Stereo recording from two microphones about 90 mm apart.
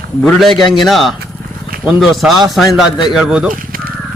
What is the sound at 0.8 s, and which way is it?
A man's voice, centre (ahead or behind).